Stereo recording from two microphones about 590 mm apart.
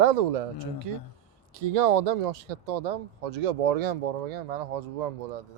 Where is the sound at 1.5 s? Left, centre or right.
Right.